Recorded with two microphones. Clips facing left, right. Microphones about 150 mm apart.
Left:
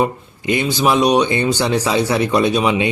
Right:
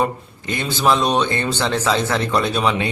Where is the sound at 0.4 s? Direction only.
15° left (ahead or behind).